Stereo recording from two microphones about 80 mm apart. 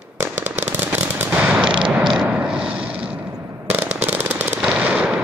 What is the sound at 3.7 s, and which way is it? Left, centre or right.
Fireworks, right.